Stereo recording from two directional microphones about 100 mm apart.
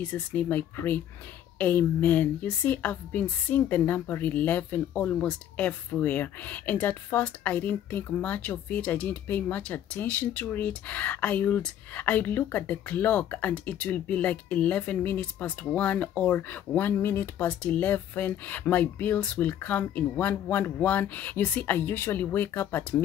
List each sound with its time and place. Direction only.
0.0 s speech: 15° left (ahead or behind)